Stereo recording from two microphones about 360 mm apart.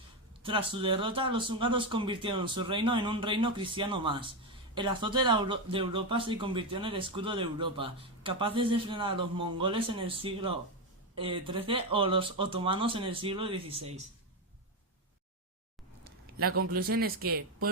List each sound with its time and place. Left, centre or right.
0.4 s speech: centre
16.6 s speech: right